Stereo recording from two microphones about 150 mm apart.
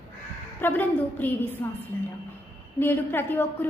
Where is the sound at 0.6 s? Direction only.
10° left (ahead or behind).